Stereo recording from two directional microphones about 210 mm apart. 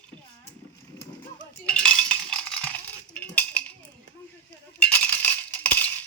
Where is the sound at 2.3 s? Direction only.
5° left (ahead or behind).